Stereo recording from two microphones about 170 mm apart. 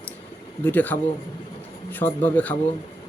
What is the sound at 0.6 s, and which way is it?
A man's voice, 10° left (ahead or behind).